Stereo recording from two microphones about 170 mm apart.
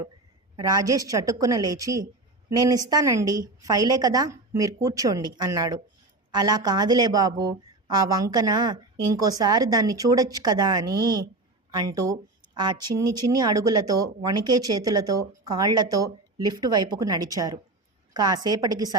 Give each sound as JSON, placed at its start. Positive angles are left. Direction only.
{"t": 0.5, "sound": "a woman's voice", "side_deg": -20}
{"t": 10.8, "sound": "a woman's voice", "side_deg": -65}
{"t": 11.7, "sound": "a woman's voice", "side_deg": -20}